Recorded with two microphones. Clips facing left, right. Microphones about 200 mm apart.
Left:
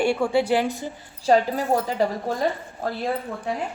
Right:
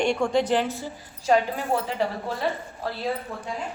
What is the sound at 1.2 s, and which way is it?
A woman's voice, 35° left (ahead or behind).